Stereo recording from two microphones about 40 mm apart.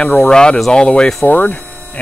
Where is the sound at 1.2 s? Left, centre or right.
Left.